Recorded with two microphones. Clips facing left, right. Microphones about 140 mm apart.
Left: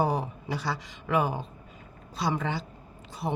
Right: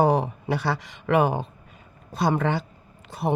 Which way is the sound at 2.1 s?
55° right (ahead or behind).